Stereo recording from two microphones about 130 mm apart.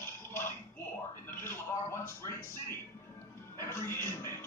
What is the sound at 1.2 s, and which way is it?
Music, 20° left (ahead or behind).